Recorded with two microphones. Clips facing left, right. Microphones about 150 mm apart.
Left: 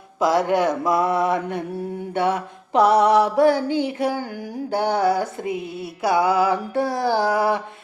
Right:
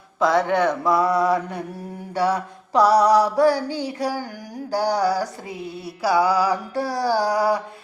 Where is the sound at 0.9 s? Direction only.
25° left (ahead or behind).